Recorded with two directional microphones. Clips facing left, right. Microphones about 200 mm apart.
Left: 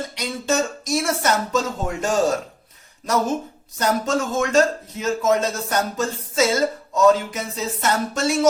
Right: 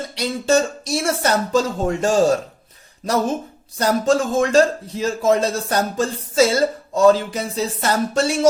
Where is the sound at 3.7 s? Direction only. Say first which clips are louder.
Right 4 dB; 30° right (ahead or behind).